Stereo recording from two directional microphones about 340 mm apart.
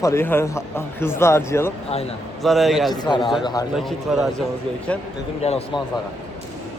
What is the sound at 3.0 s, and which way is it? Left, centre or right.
Speech, centre.